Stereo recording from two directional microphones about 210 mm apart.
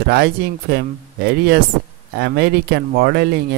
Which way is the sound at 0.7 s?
50° right (ahead or behind).